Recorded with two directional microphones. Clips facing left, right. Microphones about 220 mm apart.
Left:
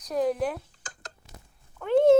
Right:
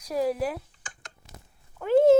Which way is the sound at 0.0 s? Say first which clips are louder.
Even; 5° right (ahead or behind).